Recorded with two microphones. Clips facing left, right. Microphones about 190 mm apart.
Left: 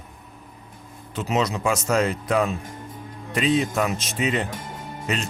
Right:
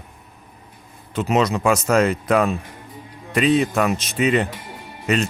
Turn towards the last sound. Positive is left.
turn(degrees=45)  # may be behind; listen again after turning